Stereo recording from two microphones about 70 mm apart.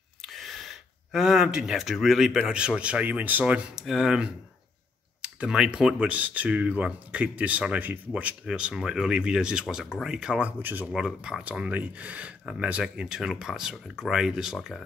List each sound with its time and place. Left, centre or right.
0.2 s a sound: centre
2.5 s speech: centre
3.8 s speech: centre
10.6 s speech: right
10.9 s speech: centre